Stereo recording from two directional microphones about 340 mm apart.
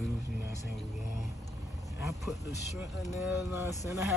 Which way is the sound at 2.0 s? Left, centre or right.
Centre.